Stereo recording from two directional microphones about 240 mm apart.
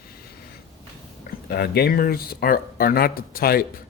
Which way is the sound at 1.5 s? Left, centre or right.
Left.